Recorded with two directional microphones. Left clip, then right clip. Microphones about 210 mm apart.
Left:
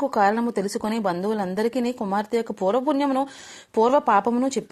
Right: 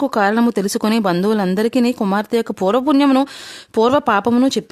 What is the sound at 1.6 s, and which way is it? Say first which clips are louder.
Speech: right 7 dB; 50° right (ahead or behind).